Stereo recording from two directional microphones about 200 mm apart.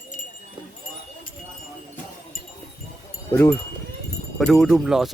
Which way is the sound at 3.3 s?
10° left (ahead or behind).